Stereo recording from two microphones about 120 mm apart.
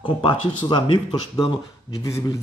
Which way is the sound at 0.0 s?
45° left (ahead or behind).